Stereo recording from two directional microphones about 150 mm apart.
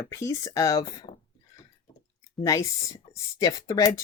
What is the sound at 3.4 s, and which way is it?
Speech, 20° left (ahead or behind).